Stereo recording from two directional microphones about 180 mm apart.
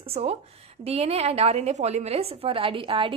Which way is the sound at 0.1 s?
35° right (ahead or behind).